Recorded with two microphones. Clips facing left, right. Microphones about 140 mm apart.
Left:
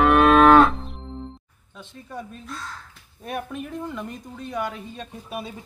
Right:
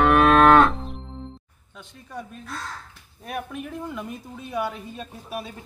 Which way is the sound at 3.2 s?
Centre (ahead or behind).